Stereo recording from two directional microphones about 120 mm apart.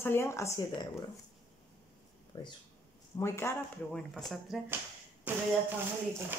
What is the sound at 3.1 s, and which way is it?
Speech, 20° left (ahead or behind).